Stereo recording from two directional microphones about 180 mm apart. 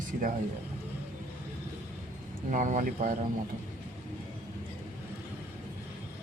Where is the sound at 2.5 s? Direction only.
45° right (ahead or behind).